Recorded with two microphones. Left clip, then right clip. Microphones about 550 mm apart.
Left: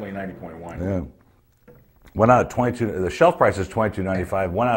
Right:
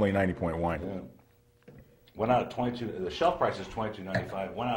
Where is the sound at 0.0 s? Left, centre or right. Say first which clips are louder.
Right 5 dB; right.